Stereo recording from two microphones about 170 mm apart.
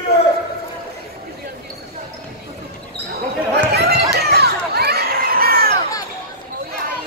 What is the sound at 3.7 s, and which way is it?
Children playing, 75° right (ahead or behind).